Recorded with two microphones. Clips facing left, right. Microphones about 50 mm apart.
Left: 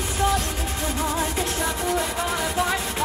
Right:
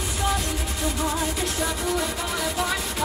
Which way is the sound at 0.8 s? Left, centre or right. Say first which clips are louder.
Even; left.